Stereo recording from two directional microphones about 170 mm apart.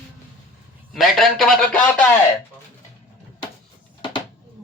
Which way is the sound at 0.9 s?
Centre (ahead or behind).